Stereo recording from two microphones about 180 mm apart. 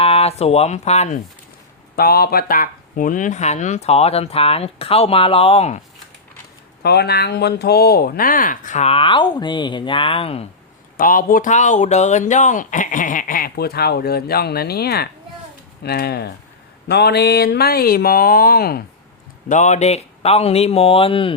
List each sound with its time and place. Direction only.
0.0 s speech: 35° left (ahead or behind)
2.0 s speech: 60° left (ahead or behind); by 5.8 s 35° left (ahead or behind)
6.8 s speech: 65° left (ahead or behind); by 10.4 s 30° left (ahead or behind)
10.9 s speech: 50° left (ahead or behind)
19.5 s speech: 40° left (ahead or behind)